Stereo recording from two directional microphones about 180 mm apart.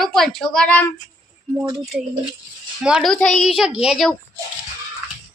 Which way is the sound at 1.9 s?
5° right (ahead or behind).